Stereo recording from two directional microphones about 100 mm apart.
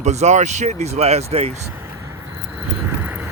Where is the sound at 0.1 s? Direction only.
90° right.